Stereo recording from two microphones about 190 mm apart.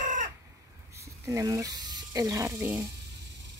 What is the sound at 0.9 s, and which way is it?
Speech, 15° right (ahead or behind).